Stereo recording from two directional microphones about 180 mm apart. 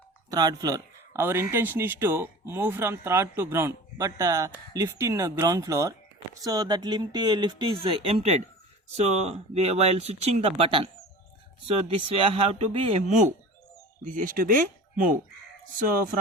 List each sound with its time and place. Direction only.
0.3 s speech: 20° right (ahead or behind)
11.9 s speech: 30° right (ahead or behind); by 15.2 s 50° right (ahead or behind)